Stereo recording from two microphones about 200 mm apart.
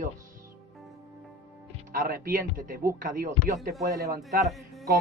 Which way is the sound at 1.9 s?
45° right (ahead or behind).